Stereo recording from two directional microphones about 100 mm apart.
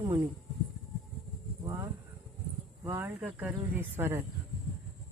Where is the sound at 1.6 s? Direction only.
30° right (ahead or behind).